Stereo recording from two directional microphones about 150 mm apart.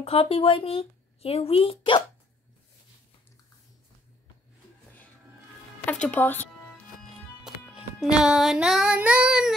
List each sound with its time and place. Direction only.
0.0 s speech: 40° left (ahead or behind)
5.9 s speech: 10° left (ahead or behind)
7.4 s music: 5° right (ahead or behind)